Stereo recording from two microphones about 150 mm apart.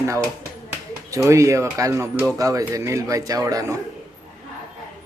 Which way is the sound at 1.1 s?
20° right (ahead or behind).